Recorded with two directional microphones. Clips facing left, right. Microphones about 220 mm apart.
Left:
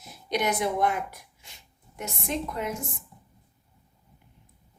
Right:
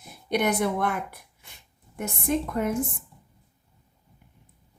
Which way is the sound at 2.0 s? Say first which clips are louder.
Right 5 dB; 55° right (ahead or behind).